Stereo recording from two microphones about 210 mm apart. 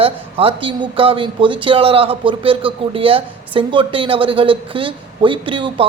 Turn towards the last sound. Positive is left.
turn(degrees=-25)  # may be behind; listen again after turning